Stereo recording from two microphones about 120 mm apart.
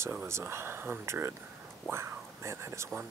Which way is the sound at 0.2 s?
20° right (ahead or behind).